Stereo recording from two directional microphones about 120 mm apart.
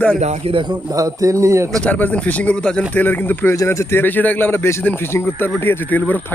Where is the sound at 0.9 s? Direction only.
25° right (ahead or behind).